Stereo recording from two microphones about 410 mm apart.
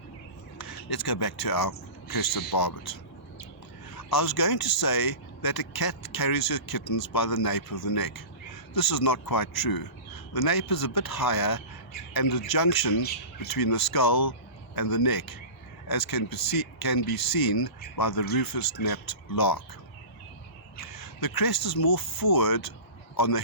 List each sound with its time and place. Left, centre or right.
0.6 s speech: left
3.9 s speech: left
20.8 s speech: left